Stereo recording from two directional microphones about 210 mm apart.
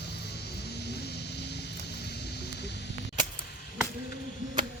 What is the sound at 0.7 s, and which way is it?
Vehicle, 50° left (ahead or behind).